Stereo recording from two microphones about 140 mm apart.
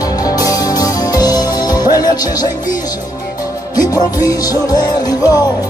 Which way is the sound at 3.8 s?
25° left (ahead or behind).